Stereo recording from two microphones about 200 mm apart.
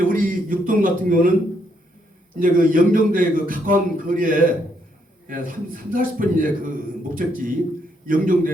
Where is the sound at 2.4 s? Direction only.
45° right (ahead or behind).